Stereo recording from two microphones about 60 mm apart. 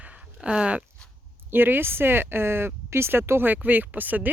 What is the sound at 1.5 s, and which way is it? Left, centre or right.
Speech, right.